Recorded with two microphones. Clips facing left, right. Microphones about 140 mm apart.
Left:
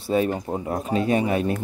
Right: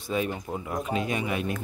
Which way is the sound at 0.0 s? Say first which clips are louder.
Left 7 dB; 40° left (ahead or behind).